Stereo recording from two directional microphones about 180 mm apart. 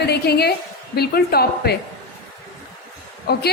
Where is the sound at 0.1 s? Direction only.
65° left (ahead or behind).